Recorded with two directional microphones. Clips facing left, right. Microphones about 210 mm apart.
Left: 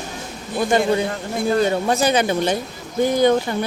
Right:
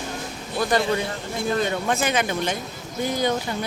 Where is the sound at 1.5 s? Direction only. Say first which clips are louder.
Left 5 dB; 35° left (ahead or behind).